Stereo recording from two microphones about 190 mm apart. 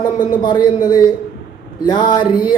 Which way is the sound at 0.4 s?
20° left (ahead or behind).